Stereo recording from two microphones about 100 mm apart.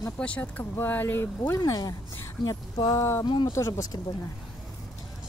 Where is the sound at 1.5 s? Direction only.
40° left (ahead or behind).